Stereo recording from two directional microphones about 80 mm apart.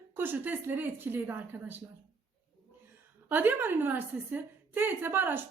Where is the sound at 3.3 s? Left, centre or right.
Right.